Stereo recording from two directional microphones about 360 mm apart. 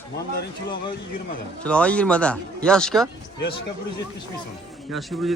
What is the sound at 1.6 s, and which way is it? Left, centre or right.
A man's voice, centre.